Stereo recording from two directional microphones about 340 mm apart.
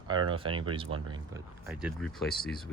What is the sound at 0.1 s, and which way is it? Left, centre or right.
Speech, centre.